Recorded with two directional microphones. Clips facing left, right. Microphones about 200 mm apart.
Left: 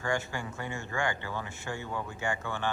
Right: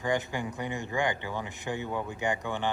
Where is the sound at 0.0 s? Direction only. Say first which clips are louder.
Right 3 dB; 20° right (ahead or behind).